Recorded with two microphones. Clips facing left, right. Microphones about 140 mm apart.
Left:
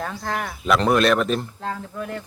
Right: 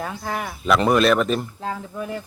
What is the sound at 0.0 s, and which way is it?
Speech, 10° right (ahead or behind).